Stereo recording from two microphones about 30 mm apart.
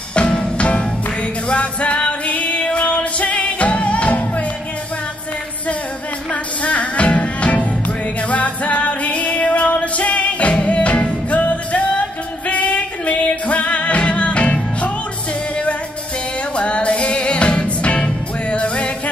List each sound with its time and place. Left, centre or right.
0.1 s music: left
6.3 s music: left
16.5 s music: left